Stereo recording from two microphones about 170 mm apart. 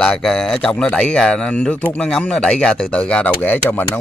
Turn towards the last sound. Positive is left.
turn(degrees=10)  # may be behind; listen again after turning